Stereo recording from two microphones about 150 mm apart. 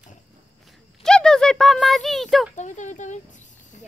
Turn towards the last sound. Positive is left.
turn(degrees=55)  # may be behind; listen again after turning